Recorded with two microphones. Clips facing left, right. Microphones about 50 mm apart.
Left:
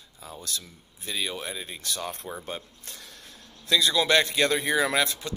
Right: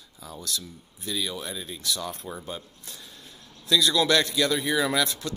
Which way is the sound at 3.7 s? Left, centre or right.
Left.